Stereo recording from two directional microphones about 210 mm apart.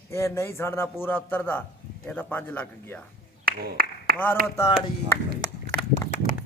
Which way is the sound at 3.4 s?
45° right (ahead or behind).